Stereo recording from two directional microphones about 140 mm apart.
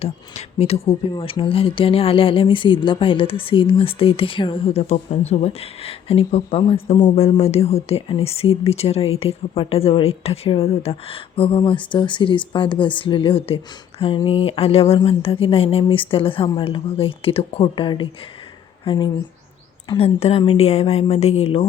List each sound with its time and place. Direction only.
0.0 s speech: 45° left (ahead or behind)
20.0 s speech: 45° left (ahead or behind)